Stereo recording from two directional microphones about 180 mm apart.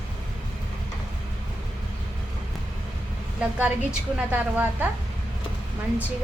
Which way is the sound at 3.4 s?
10° right (ahead or behind).